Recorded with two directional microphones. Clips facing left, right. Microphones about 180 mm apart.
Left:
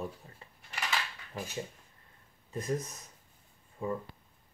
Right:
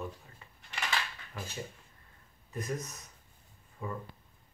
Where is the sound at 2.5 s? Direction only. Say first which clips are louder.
Left 3 dB; 30° left (ahead or behind).